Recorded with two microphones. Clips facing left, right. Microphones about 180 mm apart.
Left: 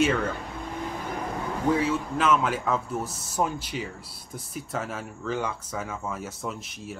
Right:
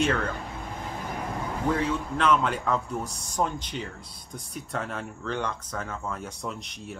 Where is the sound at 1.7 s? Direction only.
5° left (ahead or behind).